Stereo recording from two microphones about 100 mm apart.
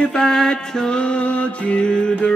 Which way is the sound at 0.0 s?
5° left (ahead or behind).